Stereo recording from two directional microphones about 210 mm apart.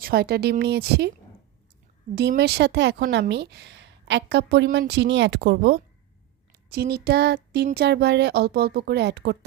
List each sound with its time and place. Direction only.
0.0 s speech: 50° right (ahead or behind)
2.1 s speech: 50° right (ahead or behind)